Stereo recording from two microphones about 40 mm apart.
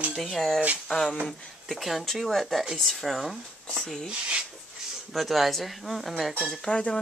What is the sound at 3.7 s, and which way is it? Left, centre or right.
Speech, centre.